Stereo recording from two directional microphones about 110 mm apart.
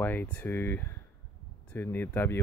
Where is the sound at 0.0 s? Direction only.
15° left (ahead or behind).